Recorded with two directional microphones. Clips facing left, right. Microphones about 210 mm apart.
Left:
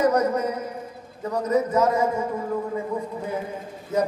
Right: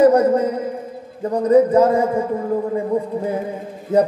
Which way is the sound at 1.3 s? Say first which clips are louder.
Right 9 dB; 30° right (ahead or behind).